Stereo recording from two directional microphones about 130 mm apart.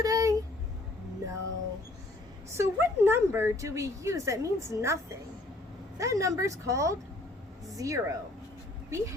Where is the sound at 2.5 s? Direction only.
20° right (ahead or behind).